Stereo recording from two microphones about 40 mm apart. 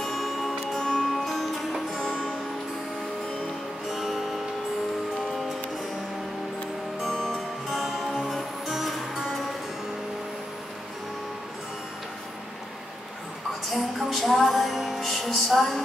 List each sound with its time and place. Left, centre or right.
0.2 s music: centre
0.7 s music: centre
1.1 s music: centre
3.9 s music: centre
7.0 s music: centre
7.7 s music: centre
13.7 s music: centre